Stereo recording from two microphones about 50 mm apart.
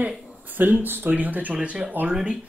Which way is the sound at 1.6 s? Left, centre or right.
Right.